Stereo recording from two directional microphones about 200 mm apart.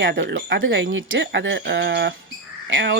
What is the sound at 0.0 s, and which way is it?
Speech, 60° right (ahead or behind).